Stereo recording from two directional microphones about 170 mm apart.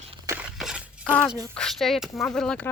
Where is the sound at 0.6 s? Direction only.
5° right (ahead or behind).